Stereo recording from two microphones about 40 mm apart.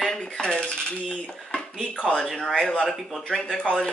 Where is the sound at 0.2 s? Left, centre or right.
Left.